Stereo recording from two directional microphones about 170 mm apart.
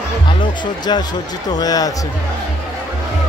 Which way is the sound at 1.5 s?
20° left (ahead or behind).